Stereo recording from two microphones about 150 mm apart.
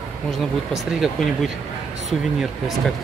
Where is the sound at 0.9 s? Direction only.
Centre (ahead or behind).